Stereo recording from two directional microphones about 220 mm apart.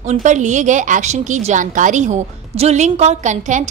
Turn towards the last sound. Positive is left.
turn(degrees=-30)  # may be behind; listen again after turning